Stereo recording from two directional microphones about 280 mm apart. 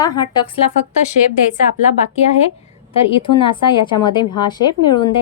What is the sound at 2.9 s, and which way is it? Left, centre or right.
A woman's voice, centre.